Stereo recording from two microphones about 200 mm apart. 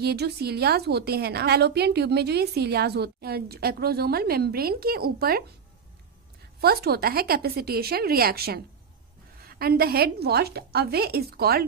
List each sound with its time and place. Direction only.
0.0 s a woman's voice: 55° right (ahead or behind)
6.6 s a woman's voice: 50° right (ahead or behind)